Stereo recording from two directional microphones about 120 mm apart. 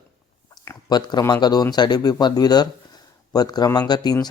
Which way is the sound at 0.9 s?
35° left (ahead or behind).